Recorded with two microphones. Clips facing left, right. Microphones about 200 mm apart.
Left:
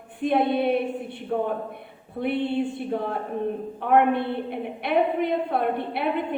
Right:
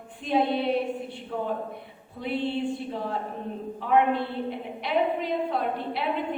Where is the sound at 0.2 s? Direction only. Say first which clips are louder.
Left 3 dB; 60° left (ahead or behind).